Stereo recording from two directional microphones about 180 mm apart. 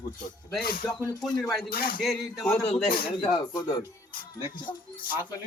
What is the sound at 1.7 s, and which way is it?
Speech, 55° left (ahead or behind).